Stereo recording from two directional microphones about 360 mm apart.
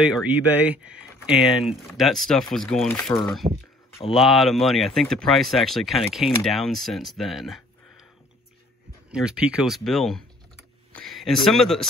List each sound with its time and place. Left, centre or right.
0.0 s speech: centre
9.1 s speech: centre